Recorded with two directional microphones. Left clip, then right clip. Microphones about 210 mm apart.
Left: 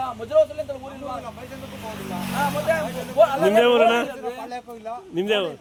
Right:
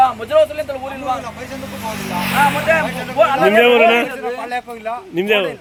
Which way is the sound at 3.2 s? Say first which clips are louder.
Right 4 dB; 50° left (ahead or behind).